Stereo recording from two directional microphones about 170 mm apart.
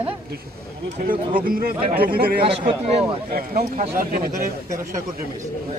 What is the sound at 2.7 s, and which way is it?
Speech, 30° right (ahead or behind).